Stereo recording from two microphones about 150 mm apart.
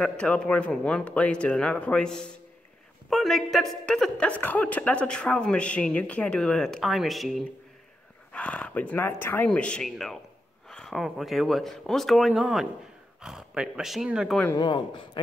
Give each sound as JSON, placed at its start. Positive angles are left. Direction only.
{"t": 0.0, "sound": "a man's voice", "side_deg": 5}